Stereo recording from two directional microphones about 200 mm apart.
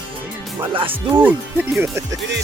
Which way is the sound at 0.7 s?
25° right (ahead or behind).